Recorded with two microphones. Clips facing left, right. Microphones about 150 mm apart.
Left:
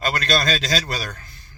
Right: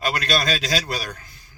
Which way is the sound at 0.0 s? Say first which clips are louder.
Left 1 dB; 10° right (ahead or behind).